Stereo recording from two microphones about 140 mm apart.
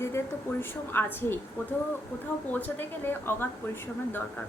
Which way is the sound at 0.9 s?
15° left (ahead or behind).